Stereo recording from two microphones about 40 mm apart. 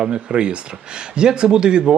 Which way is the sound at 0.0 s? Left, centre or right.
Right.